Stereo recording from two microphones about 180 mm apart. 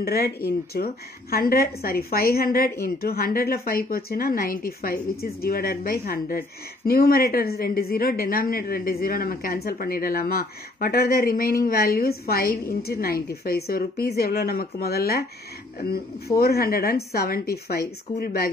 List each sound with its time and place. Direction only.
0.0 s a woman's voice: 60° left (ahead or behind)
16.3 s a woman's voice: 60° left (ahead or behind)